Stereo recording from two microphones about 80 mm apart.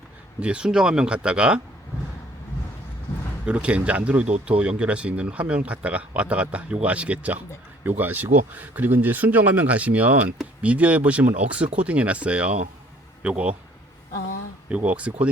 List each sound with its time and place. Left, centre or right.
0.3 s speech: centre
3.4 s speech: centre
14.7 s speech: centre